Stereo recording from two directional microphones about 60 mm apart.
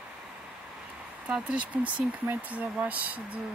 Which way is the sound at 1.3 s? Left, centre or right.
Centre.